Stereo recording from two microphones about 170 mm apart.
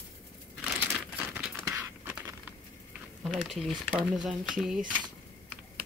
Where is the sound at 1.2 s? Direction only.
10° right (ahead or behind).